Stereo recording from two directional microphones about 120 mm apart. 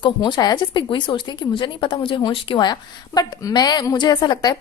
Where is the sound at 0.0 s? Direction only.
35° left (ahead or behind).